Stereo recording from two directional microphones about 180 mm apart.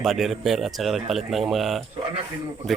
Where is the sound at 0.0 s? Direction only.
Centre (ahead or behind).